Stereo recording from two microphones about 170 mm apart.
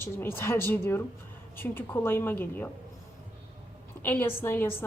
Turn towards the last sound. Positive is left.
turn(degrees=15)  # may be behind; listen again after turning